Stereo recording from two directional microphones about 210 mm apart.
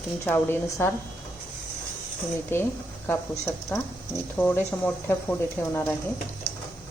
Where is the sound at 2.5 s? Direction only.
10° left (ahead or behind).